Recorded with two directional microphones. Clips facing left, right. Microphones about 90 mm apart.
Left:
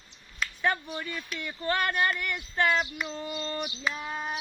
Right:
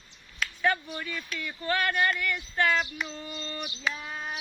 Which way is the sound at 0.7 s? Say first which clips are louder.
Even; 20° left (ahead or behind).